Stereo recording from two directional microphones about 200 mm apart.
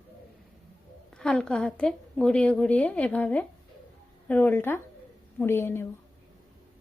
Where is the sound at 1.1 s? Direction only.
5° left (ahead or behind).